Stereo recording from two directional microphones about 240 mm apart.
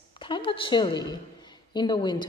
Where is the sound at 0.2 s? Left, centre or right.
Left.